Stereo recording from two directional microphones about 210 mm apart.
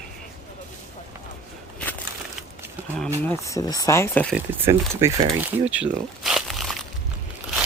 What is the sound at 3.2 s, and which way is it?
Speech, 15° left (ahead or behind).